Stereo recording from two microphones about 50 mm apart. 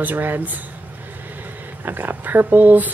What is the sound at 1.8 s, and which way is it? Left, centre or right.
Speech, right.